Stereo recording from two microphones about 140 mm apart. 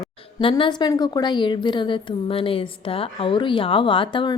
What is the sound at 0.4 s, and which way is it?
A woman's voice, 35° left (ahead or behind).